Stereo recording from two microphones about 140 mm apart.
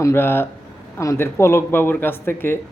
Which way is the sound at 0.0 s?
15° left (ahead or behind).